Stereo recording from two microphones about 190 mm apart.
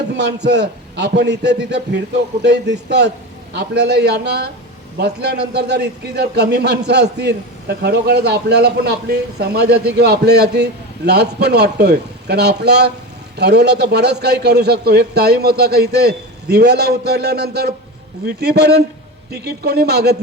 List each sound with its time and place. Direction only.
0.2 s a man's voice: 65° right (ahead or behind)